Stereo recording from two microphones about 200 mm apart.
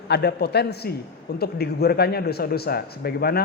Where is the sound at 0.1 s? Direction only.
55° left (ahead or behind).